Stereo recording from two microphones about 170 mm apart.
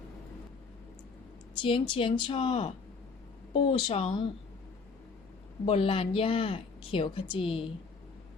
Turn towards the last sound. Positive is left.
turn(degrees=35)  # may be behind; listen again after turning